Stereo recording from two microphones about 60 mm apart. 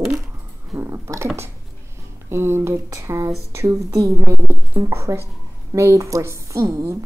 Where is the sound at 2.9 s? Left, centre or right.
Right.